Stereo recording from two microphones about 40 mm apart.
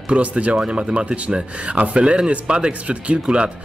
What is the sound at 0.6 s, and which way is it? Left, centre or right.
Speech, right.